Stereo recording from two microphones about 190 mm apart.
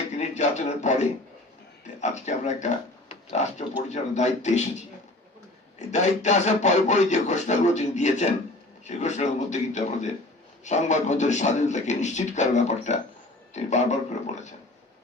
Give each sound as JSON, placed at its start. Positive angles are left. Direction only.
{"t": 0.1, "sound": "speech", "side_deg": 35}
{"t": 3.8, "sound": "rub", "side_deg": 35}
{"t": 5.9, "sound": "rub", "side_deg": 40}